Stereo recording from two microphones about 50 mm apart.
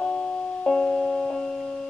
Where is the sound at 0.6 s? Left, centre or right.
Centre.